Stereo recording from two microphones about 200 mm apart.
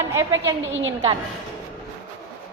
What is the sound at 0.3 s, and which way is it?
Speech, 70° right (ahead or behind).